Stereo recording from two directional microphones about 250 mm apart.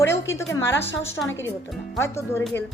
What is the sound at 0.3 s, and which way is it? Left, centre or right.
A woman's voice, centre.